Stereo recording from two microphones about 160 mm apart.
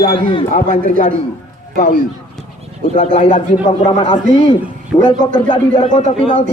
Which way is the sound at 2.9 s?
45° left (ahead or behind).